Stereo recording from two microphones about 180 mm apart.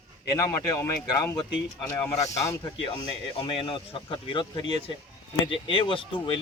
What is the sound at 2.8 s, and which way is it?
Speech, 30° left (ahead or behind).